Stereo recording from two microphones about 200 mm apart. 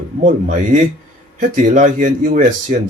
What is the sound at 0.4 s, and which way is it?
Speech, 40° right (ahead or behind).